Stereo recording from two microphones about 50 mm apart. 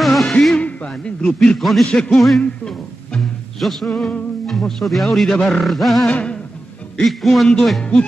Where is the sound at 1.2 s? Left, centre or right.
Centre.